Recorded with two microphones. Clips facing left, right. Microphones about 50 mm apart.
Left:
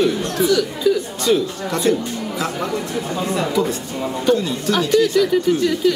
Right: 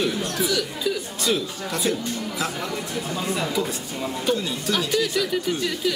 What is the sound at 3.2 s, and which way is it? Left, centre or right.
Speech, centre.